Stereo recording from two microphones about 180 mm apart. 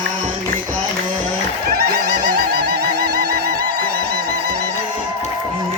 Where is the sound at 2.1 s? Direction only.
55° right (ahead or behind).